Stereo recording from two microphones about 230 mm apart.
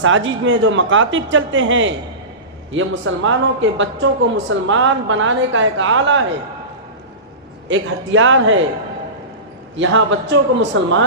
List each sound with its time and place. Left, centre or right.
0.0 s speech: right
7.7 s speech: right
9.7 s a man's voice: right